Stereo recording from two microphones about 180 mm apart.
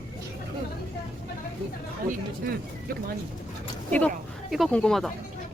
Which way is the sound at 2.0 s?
55° right (ahead or behind).